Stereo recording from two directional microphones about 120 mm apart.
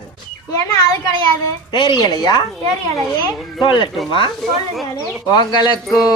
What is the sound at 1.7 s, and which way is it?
Speech, 40° left (ahead or behind).